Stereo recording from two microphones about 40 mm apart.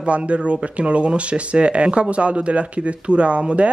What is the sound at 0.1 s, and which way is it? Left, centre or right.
Speech, right.